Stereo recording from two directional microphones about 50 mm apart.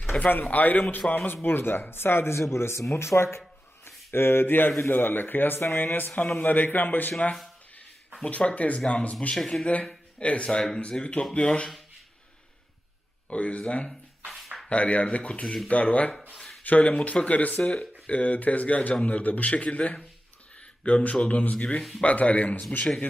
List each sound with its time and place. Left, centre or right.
0.2 s a man's voice: left
1.3 s a man's voice: left
8.2 s speech: left
9.3 s speech: centre
9.8 s a man's voice: left
13.3 s speech: left
17.6 s a sound: centre
18.1 s a man's voice: left